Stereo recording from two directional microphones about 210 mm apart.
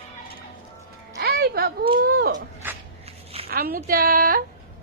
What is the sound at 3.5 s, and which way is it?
Speech, 45° right (ahead or behind).